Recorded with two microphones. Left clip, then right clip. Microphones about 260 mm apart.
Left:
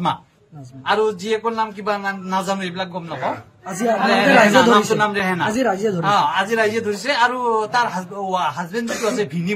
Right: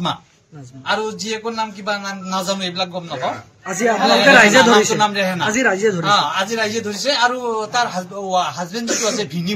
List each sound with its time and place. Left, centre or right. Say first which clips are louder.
0.8 s speech: left 3 dB; centre